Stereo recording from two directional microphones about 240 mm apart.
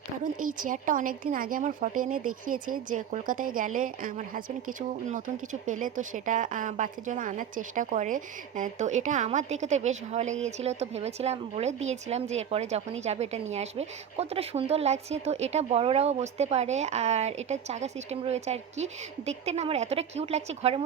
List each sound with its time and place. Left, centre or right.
0.3 s a woman's voice: right